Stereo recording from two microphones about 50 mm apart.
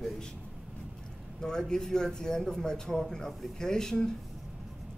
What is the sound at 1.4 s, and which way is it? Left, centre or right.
Speech, centre.